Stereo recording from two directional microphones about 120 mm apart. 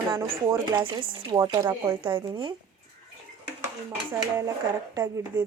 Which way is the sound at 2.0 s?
45° right (ahead or behind).